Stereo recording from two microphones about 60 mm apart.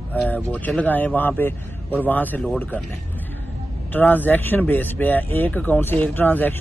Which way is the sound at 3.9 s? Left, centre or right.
Left.